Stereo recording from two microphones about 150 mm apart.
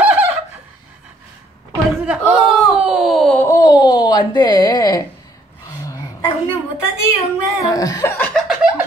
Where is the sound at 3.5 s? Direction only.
25° left (ahead or behind).